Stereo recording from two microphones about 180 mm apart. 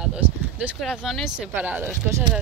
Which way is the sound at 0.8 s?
Centre (ahead or behind).